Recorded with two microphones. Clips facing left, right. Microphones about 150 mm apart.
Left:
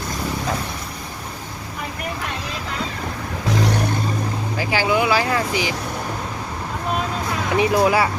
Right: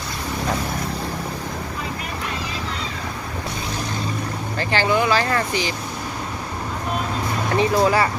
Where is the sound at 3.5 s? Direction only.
75° left (ahead or behind).